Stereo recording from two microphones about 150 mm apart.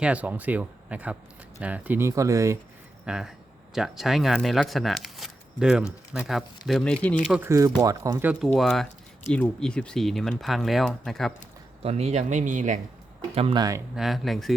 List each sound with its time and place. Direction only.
0.0 s speech: 10° right (ahead or behind)
3.1 s speech: 5° right (ahead or behind)
7.3 s speech: 20° right (ahead or behind)
8.3 s speech: centre (ahead or behind)
11.8 s speech: 45° right (ahead or behind)
13.3 s speech: 40° right (ahead or behind)
13.6 s speech: 20° right (ahead or behind)
13.9 s speech: centre (ahead or behind)